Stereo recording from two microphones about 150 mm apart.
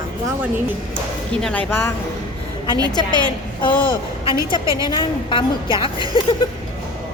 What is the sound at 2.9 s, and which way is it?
Speech, 30° left (ahead or behind).